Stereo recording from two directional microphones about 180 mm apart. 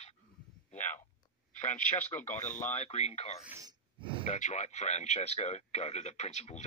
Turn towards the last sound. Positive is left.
turn(degrees=40)  # may be behind; listen again after turning